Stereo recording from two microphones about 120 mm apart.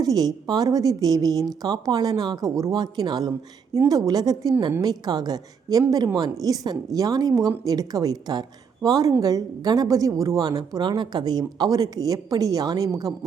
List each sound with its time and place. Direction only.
0.0 s a woman's voice: 35° right (ahead or behind)